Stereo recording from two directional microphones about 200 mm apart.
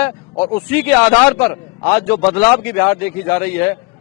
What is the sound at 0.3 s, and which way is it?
Speech, 25° left (ahead or behind).